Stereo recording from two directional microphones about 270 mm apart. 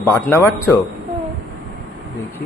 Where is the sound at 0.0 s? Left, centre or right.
Centre.